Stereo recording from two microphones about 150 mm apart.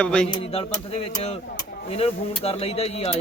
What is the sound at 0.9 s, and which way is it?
Speech, 45° left (ahead or behind).